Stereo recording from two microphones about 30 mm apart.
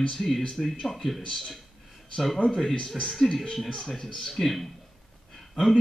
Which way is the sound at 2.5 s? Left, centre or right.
Centre.